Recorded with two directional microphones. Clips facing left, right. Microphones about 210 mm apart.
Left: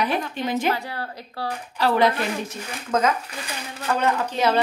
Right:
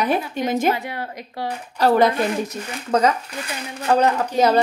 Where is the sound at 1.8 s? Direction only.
40° right (ahead or behind).